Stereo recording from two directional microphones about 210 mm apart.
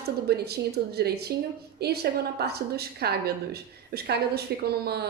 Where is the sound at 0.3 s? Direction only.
50° right (ahead or behind).